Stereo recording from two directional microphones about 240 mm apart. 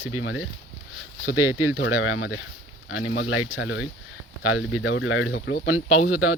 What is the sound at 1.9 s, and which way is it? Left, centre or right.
Speech, left.